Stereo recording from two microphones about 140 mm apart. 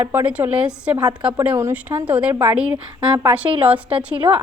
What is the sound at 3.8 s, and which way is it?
Speech, 40° right (ahead or behind).